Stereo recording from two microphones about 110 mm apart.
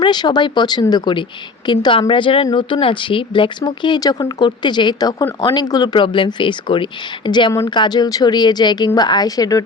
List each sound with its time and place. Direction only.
0.0 s speech: 40° left (ahead or behind)